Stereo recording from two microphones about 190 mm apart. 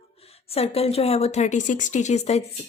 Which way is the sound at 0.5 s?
30° left (ahead or behind).